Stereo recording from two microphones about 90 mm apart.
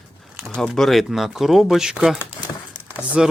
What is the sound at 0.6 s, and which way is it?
Speech, centre (ahead or behind).